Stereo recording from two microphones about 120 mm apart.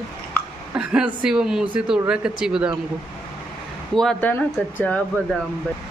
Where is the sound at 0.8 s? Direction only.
5° right (ahead or behind).